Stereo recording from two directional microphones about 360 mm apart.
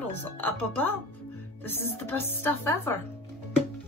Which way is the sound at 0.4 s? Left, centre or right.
Centre.